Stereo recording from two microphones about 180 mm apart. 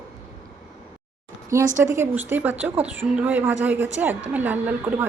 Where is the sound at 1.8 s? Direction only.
15° right (ahead or behind).